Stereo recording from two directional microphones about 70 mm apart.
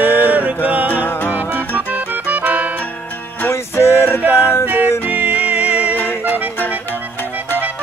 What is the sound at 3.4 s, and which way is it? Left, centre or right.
Music, left.